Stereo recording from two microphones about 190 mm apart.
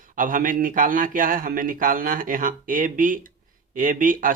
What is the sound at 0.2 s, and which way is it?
Speech, 45° right (ahead or behind).